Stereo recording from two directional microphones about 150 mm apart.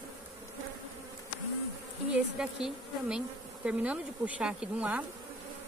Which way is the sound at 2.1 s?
5° right (ahead or behind).